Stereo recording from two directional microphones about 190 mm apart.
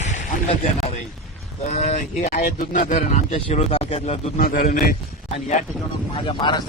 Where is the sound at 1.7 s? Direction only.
35° left (ahead or behind).